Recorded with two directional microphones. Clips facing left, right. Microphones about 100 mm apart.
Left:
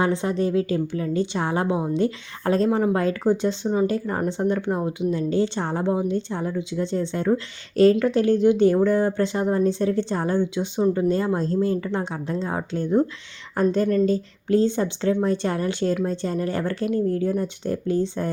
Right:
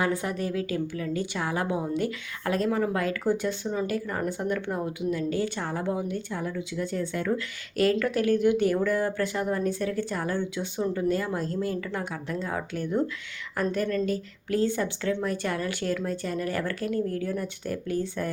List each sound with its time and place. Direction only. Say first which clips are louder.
0.0 s a woman's voice: left 6 dB; 25° left (ahead or behind)